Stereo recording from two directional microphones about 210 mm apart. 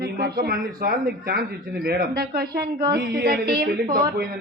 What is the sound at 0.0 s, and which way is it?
A man's voice, 50° right (ahead or behind).